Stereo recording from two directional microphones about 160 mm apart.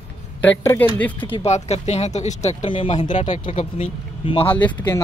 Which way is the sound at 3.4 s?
40° left (ahead or behind).